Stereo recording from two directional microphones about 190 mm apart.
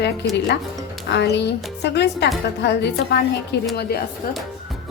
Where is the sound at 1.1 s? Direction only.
65° left (ahead or behind).